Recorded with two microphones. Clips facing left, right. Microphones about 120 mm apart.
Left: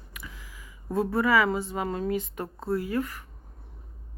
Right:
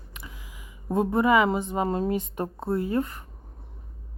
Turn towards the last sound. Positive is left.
turn(degrees=-25)  # may be behind; listen again after turning